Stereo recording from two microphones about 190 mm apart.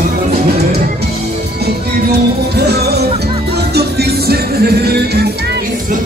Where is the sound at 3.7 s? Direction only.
60° right (ahead or behind).